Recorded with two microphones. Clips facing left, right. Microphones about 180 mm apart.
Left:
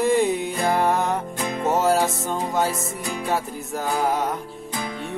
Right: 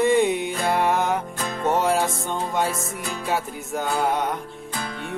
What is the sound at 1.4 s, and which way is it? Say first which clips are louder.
Music: left 2 dB; 15° left (ahead or behind).